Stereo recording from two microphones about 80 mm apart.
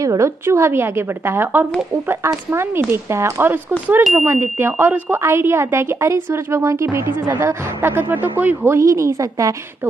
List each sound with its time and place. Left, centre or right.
0.0 s a woman's voice: right
8.7 s speech: right